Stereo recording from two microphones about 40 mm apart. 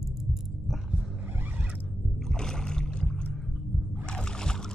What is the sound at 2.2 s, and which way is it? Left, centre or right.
Rowboat, centre.